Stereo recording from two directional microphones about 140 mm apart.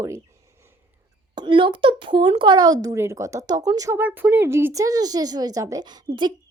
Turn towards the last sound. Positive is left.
turn(degrees=-30)  # may be behind; listen again after turning